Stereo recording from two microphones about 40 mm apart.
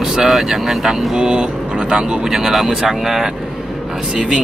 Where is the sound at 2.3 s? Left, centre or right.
Centre.